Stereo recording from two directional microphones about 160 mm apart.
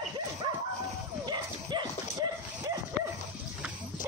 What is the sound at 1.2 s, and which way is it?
Dog, 25° right (ahead or behind).